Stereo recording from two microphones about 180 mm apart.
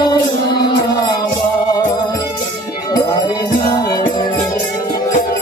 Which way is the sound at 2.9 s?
20° left (ahead or behind).